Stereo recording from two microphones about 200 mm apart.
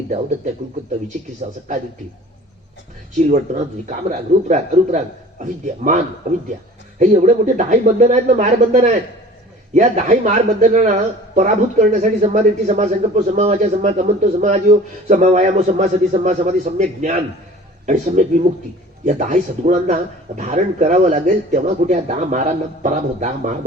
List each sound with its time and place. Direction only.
1.4 s speech: 35° right (ahead or behind)
3.2 s speech: 35° right (ahead or behind)
7.0 s speech: 35° right (ahead or behind)